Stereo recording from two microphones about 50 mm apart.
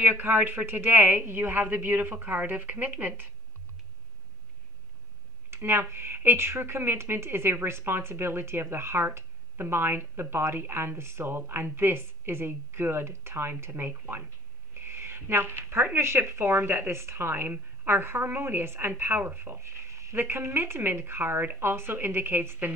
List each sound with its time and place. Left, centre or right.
0.0 s speech: right
5.5 s a woman's voice: right
17.3 s speech: right
19.6 s a sound: right
20.2 s speech: right